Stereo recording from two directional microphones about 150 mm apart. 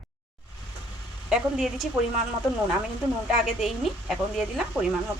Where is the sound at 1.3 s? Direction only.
5° right (ahead or behind).